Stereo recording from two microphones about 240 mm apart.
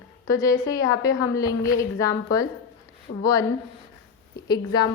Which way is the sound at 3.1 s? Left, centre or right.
Left.